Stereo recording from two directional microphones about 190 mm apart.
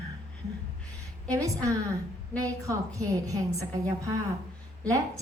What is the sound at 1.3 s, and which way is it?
A woman's voice, 15° right (ahead or behind).